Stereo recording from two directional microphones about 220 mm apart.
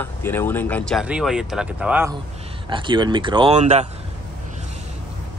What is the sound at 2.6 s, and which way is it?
Speech, 20° right (ahead or behind).